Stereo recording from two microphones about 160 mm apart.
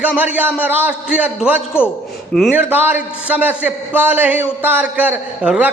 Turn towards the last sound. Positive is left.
turn(degrees=-10)  # may be behind; listen again after turning